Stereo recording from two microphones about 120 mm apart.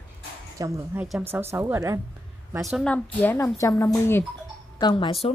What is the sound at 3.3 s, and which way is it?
Speech, 25° left (ahead or behind).